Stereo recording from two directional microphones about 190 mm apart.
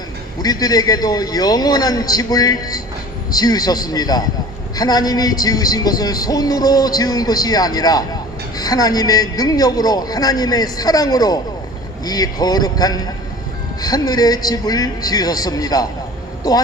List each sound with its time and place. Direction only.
0.4 s speech: 20° left (ahead or behind)